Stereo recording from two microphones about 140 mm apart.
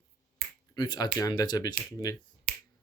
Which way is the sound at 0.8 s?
30° left (ahead or behind).